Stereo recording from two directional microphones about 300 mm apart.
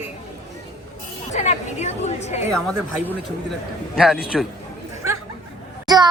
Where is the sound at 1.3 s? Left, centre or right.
Left.